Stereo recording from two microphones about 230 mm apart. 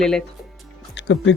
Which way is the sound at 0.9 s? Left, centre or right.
Left.